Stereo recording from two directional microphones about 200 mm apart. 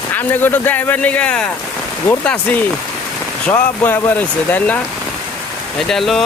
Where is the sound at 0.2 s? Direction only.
10° left (ahead or behind).